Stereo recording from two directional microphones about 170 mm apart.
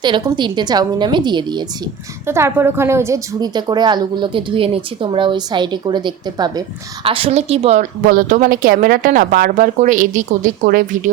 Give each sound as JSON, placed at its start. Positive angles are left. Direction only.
{"t": 0.0, "sound": "a woman's voice", "side_deg": -25}
{"t": 2.2, "sound": "a woman's voice", "side_deg": -15}
{"t": 8.0, "sound": "speech", "side_deg": -55}